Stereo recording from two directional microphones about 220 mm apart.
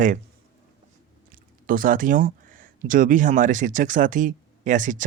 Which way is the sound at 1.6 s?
40° right (ahead or behind).